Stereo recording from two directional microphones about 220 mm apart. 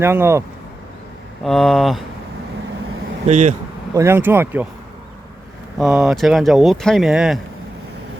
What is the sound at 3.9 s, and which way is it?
Speech, 10° right (ahead or behind).